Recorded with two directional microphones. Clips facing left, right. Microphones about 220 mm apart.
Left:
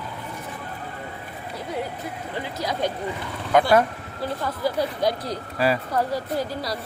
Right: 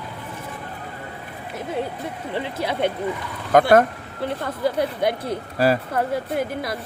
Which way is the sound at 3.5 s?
50° right (ahead or behind).